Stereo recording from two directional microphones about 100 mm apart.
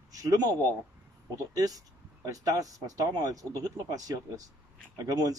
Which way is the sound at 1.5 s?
40° right (ahead or behind).